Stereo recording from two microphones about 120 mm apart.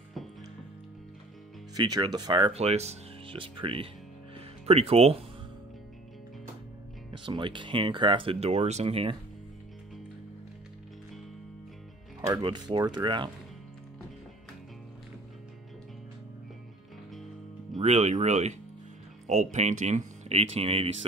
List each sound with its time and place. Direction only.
1.8 s speech: 35° right (ahead or behind)
2.6 s speech: 65° right (ahead or behind)
3.3 s speech: 45° right (ahead or behind)
4.6 s speech: 60° right (ahead or behind)
7.1 s speech: 40° right (ahead or behind); by 8.8 s 70° right (ahead or behind)
8.8 s speech: 50° right (ahead or behind)
12.4 s speech: 40° right (ahead or behind)
17.8 s speech: 65° right (ahead or behind)